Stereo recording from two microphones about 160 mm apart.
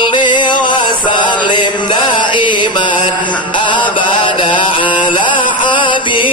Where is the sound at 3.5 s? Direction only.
30° left (ahead or behind).